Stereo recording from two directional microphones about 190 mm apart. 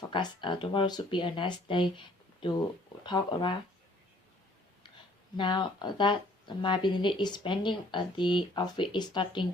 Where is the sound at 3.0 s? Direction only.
25° left (ahead or behind).